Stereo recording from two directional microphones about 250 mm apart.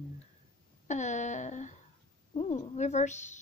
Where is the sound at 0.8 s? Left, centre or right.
Left.